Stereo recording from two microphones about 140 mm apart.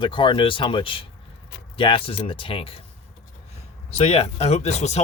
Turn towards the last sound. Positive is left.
turn(degrees=50)  # may be behind; listen again after turning